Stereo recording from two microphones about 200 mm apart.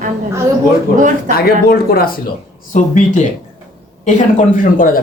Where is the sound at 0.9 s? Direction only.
40° right (ahead or behind).